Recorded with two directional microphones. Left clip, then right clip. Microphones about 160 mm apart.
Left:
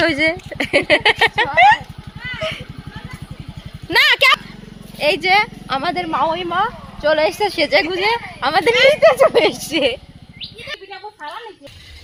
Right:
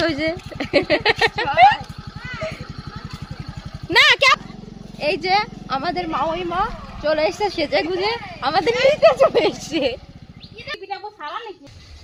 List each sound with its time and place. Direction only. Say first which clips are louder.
0.0 s speech: left 5 dB; 45° left (ahead or behind); by 1.8 s 30° left (ahead or behind)
3.8 s a sound: left 1 dB; centre (ahead or behind)
4.9 s speech: left 5 dB; 40° left (ahead or behind)